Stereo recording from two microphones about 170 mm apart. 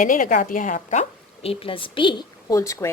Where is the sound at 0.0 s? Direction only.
50° left (ahead or behind).